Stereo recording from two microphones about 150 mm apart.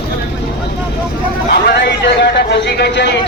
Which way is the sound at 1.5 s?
90° left.